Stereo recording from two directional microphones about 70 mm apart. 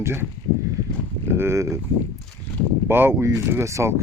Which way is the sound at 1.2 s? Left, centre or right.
Right.